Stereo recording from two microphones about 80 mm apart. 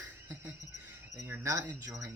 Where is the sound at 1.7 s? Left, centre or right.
Right.